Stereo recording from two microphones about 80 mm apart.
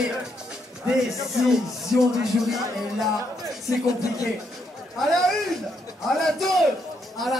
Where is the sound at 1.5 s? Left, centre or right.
Centre.